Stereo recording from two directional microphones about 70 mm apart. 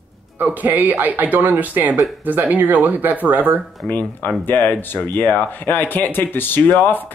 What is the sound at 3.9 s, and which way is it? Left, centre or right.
Speech, left.